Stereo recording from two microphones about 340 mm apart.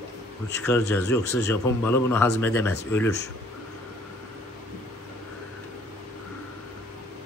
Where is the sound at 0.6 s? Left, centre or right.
Centre.